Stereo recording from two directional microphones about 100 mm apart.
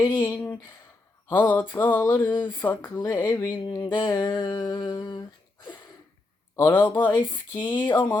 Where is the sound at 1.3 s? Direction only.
20° left (ahead or behind).